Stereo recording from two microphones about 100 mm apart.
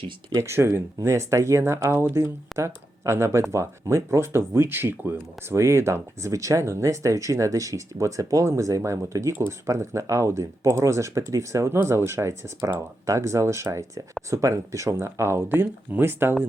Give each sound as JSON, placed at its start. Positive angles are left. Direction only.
{"t": 0.3, "sound": "speech", "side_deg": -25}